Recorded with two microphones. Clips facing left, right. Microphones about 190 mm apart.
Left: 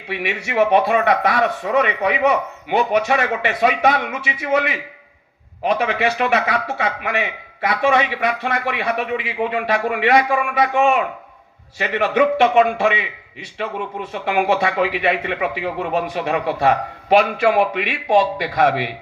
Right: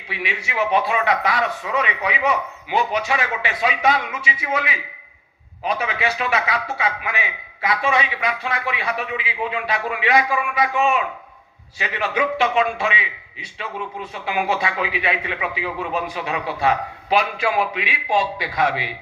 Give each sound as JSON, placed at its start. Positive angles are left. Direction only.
{"t": 0.1, "sound": "a man's voice", "side_deg": 60}